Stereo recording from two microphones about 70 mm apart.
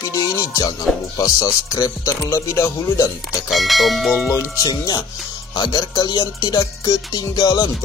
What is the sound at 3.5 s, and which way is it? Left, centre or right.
Speech, centre.